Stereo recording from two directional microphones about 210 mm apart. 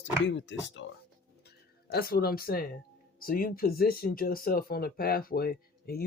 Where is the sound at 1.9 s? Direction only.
45° left (ahead or behind).